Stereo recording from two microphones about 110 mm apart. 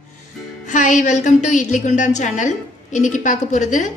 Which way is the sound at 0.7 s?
90° left.